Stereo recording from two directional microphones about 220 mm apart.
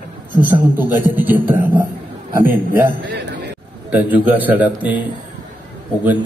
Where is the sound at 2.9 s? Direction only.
50° right (ahead or behind).